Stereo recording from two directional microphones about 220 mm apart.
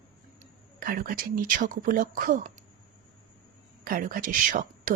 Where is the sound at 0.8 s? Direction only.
40° right (ahead or behind).